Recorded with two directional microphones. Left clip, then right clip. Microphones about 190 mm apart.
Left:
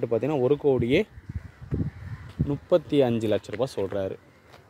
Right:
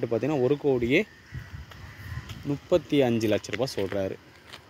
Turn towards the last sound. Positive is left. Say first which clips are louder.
# left 1 dB
turn(degrees=-5)  # may be behind; listen again after turning